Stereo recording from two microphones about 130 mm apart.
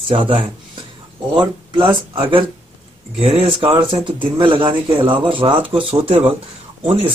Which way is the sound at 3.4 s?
40° right (ahead or behind).